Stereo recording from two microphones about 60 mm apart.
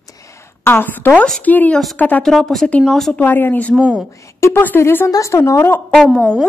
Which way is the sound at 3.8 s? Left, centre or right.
Centre.